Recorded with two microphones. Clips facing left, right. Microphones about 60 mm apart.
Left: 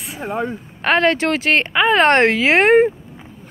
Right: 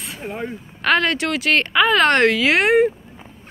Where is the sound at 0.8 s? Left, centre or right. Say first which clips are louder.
Left 3 dB; left.